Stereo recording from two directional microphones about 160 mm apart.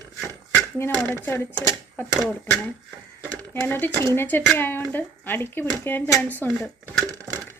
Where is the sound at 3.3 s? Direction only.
15° left (ahead or behind).